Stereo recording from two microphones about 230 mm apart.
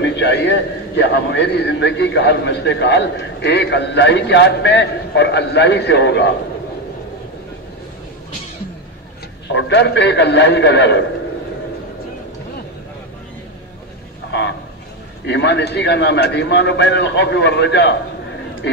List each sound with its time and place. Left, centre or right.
0.0 s a man's voice: left
9.5 s a man's voice: left
15.2 s a man's voice: left